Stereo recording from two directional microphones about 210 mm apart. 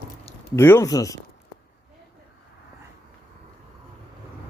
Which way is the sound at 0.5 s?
10° left (ahead or behind).